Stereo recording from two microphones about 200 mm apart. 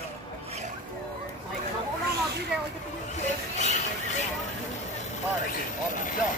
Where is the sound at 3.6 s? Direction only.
35° left (ahead or behind).